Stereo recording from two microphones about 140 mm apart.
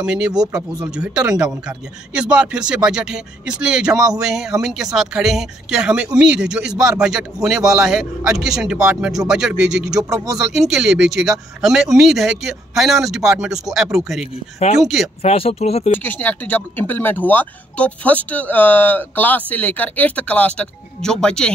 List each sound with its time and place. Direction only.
0.0 s speech: 5° right (ahead or behind)
0.5 s speech: 25° right (ahead or behind)
0.9 s speech: 5° right (ahead or behind)
3.9 s speech: 25° right (ahead or behind)
4.2 s speech: 5° right (ahead or behind)
10.0 s speech: 25° right (ahead or behind)
10.3 s speech: centre (ahead or behind)
15.2 s speech: 45° left (ahead or behind)
15.9 s speech: 15° left (ahead or behind)